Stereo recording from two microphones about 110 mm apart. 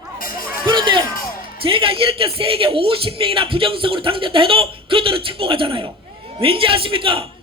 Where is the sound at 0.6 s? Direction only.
45° right (ahead or behind).